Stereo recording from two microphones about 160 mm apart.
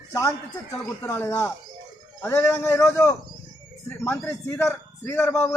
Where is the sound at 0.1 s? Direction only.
20° left (ahead or behind).